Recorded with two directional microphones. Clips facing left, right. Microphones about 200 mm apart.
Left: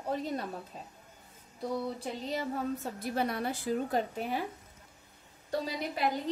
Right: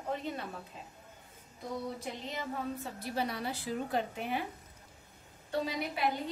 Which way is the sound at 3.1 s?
50° left (ahead or behind).